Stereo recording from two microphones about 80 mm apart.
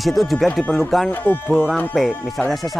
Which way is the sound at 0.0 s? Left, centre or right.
Centre.